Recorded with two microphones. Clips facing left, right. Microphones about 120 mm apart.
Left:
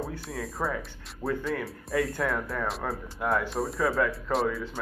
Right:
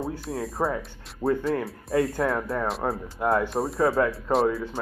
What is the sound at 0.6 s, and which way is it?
Speech, 25° right (ahead or behind).